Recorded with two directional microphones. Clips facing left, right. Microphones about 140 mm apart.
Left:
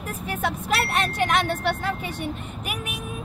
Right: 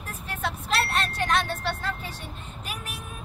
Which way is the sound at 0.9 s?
15° left (ahead or behind).